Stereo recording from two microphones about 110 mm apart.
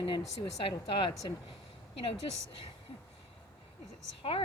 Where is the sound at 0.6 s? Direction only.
50° left (ahead or behind).